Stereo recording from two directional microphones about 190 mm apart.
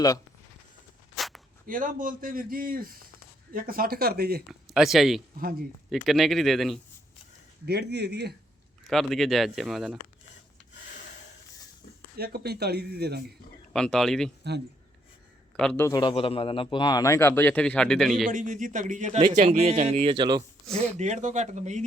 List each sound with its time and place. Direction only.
1.1 s a sound: centre (ahead or behind)
1.6 s a man's voice: 45° right (ahead or behind)
4.7 s speech: centre (ahead or behind)
5.4 s a man's voice: 50° right (ahead or behind)
5.9 s speech: centre (ahead or behind)
7.6 s speech: 60° right (ahead or behind)
8.9 s speech: centre (ahead or behind)
12.1 s speech: 55° right (ahead or behind)
13.7 s speech: 5° left (ahead or behind)
15.5 s a man's voice: 5° left (ahead or behind)
18.3 s a man's voice: 40° right (ahead or behind); by 20.4 s 25° right (ahead or behind)
21.0 s a man's voice: 40° right (ahead or behind)